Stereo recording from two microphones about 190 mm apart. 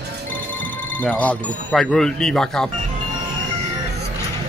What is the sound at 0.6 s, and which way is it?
Speech, 10° left (ahead or behind).